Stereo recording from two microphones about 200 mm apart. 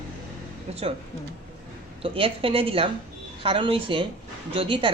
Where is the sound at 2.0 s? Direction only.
25° right (ahead or behind).